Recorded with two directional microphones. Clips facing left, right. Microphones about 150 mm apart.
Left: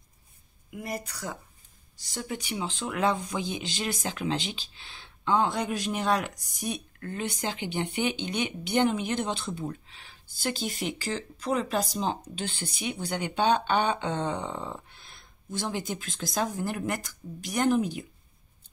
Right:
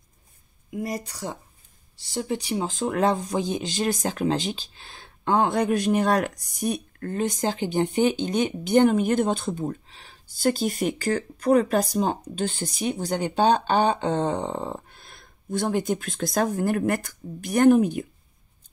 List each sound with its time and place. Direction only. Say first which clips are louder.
0.7 s speech: right 5 dB; 35° right (ahead or behind); by 18.0 s 55° right (ahead or behind)